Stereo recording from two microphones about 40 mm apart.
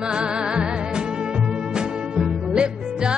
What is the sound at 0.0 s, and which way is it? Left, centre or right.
Music, right.